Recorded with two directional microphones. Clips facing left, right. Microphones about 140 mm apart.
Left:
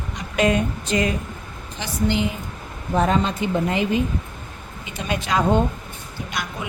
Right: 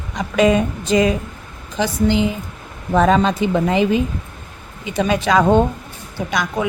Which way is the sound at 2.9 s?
90° right.